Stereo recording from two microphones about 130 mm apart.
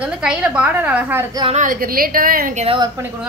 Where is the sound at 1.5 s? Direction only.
90° right.